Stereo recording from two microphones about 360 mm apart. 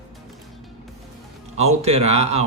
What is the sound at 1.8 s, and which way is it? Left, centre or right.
Mantra, centre.